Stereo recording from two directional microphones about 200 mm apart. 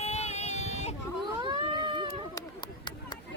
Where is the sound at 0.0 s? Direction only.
35° left (ahead or behind).